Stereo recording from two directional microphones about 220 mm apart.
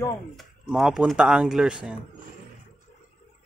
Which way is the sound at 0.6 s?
Centre (ahead or behind).